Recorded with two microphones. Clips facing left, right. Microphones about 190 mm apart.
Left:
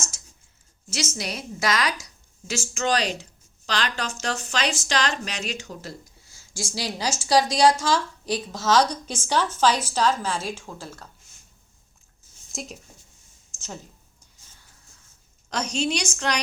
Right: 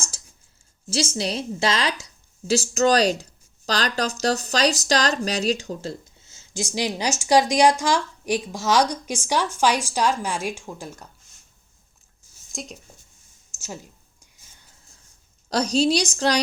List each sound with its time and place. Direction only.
0.1 s a sound: 35° right (ahead or behind)
0.9 s a woman's voice: 30° right (ahead or behind)
2.5 s a woman's voice: 35° right (ahead or behind); by 11.1 s 15° right (ahead or behind)
12.5 s speech: centre (ahead or behind)
13.5 s a sound: 10° right (ahead or behind)
15.4 s a woman's voice: 35° right (ahead or behind)